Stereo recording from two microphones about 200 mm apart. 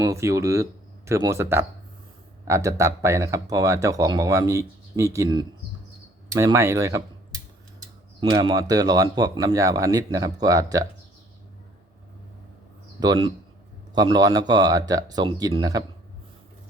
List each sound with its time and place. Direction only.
0.0 s speech: 15° right (ahead or behind)
8.2 s speech: 20° right (ahead or behind)
13.0 s speech: 20° right (ahead or behind)